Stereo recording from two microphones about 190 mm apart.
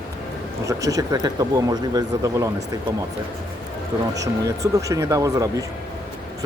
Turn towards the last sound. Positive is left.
turn(degrees=-15)  # may be behind; listen again after turning